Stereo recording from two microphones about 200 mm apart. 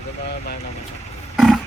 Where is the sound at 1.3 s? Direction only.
Centre (ahead or behind).